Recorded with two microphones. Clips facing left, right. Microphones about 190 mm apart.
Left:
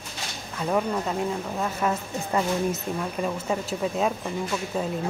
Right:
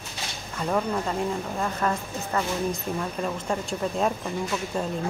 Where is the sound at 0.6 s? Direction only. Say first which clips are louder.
Left 1 dB; 5° left (ahead or behind).